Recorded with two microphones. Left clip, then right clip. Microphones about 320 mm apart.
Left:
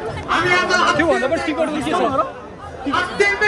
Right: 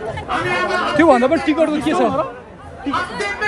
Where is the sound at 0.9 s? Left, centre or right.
Centre.